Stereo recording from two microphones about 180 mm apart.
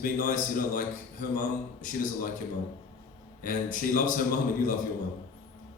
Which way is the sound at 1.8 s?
50° left (ahead or behind).